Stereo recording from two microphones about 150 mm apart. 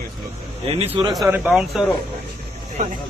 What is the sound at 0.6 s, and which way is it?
Speech, 40° right (ahead or behind).